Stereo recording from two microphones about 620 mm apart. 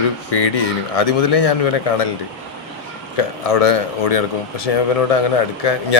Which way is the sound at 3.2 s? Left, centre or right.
Left.